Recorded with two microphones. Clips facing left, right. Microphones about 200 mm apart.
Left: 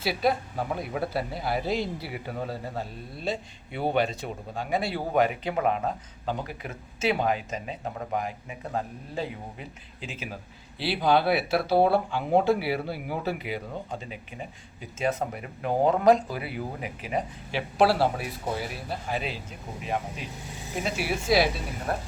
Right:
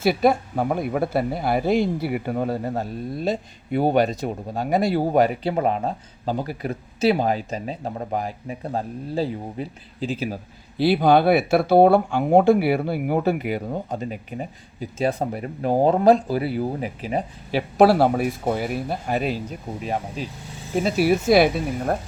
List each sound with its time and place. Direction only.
0.0 s speech: 50° right (ahead or behind); by 10.2 s 35° right (ahead or behind)
10.8 s speech: 45° right (ahead or behind)
19.8 s speech: 35° right (ahead or behind); by 21.9 s 55° right (ahead or behind)